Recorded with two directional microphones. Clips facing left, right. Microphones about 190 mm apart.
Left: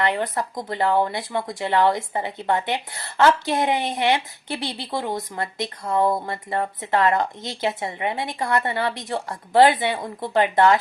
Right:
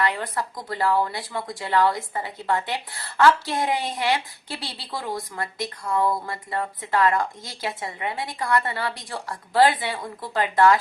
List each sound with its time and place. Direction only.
0.0 s a woman's voice: 20° left (ahead or behind)